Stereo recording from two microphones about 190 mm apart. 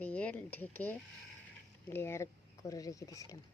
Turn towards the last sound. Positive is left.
turn(degrees=15)  # may be behind; listen again after turning